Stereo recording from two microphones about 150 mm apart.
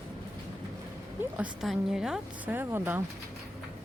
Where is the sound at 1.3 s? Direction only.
5° right (ahead or behind).